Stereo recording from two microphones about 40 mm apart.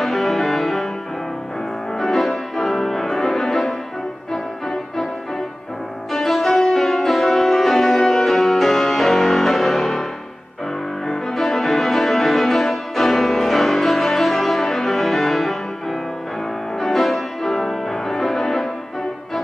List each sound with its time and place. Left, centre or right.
0.0 s music: centre
2.0 s music: centre
6.1 s music: centre
11.1 s music: centre